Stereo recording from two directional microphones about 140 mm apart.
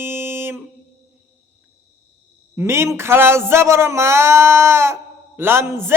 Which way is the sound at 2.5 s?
20° right (ahead or behind).